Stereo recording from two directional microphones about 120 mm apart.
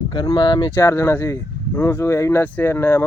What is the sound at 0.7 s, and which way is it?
Speech, 25° left (ahead or behind).